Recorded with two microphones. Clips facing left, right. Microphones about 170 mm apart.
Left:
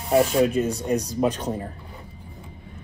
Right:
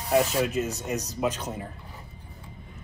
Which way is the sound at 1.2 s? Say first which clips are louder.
Left 5 dB; 35° left (ahead or behind).